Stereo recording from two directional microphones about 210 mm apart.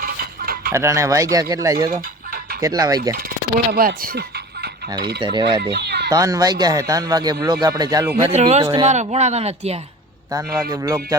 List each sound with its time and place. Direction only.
0.0 s a sound: 45° right (ahead or behind)
0.7 s speech: 15° right (ahead or behind)
1.9 s chicken: 45° right (ahead or behind)
2.6 s speech: 15° right (ahead or behind)
3.2 s speech: 45° right (ahead or behind)
5.2 s speech: 20° right (ahead or behind)
5.7 s a sound: 55° right (ahead or behind)
6.1 s speech: 15° right (ahead or behind)
8.2 s speech: 30° right (ahead or behind)
10.3 s speech: 15° right (ahead or behind)